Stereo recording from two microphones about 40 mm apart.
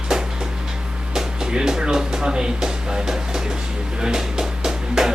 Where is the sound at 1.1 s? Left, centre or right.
Centre.